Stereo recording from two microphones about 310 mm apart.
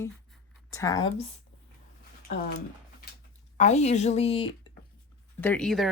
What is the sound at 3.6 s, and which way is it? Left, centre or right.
Speech, left.